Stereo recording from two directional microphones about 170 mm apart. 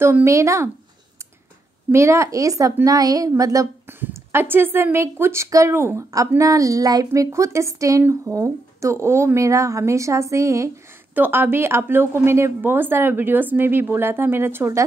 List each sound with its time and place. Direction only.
0.0 s a woman's voice: 15° right (ahead or behind)
1.9 s a woman's voice: 15° right (ahead or behind)